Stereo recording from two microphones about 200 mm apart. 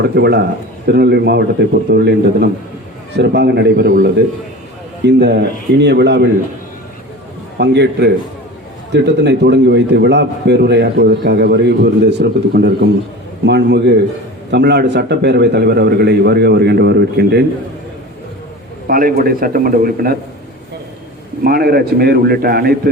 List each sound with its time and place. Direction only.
0.0 s a man's voice: 55° right (ahead or behind)
5.0 s a man's voice: 55° right (ahead or behind)
7.6 s a man's voice: 55° right (ahead or behind)
18.9 s a man's voice: 45° right (ahead or behind)
21.4 s a man's voice: 50° right (ahead or behind)